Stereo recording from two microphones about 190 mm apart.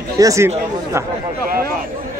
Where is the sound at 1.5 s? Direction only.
50° right (ahead or behind).